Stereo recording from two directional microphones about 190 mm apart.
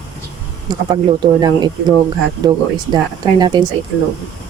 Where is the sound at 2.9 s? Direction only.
20° right (ahead or behind).